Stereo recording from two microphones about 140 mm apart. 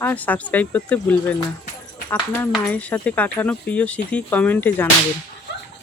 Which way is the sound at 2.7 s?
10° left (ahead or behind).